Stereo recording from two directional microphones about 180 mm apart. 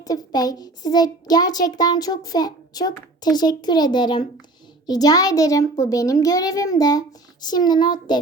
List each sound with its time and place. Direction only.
0.0 s a child's voice: 20° left (ahead or behind)